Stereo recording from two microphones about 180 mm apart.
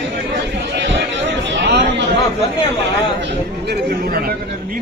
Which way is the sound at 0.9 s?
75° right (ahead or behind).